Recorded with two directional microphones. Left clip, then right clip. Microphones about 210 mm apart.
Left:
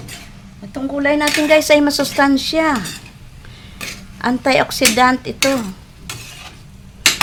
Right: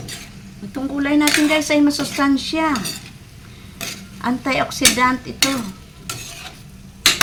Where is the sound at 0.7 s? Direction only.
30° left (ahead or behind).